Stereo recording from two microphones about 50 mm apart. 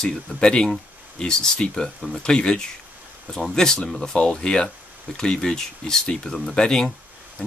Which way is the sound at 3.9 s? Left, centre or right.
Centre.